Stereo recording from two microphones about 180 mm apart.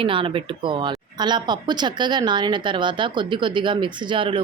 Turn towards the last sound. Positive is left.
turn(degrees=-30)  # may be behind; listen again after turning